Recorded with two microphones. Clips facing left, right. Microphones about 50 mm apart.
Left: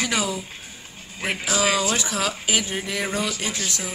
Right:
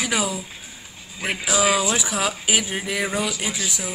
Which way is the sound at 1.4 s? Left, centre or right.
Centre.